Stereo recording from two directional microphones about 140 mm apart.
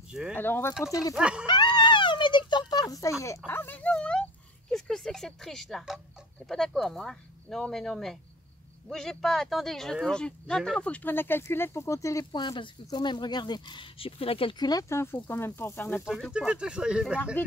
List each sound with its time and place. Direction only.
0.1 s speech: 5° right (ahead or behind)
0.4 s speech: 15° left (ahead or behind)
1.1 s speech: 5° right (ahead or behind)
1.4 s a sound: 35° left (ahead or behind); by 4.2 s 5° left (ahead or behind)
4.6 s speech: 5° left (ahead or behind)
16.3 s speech: 5° right (ahead or behind)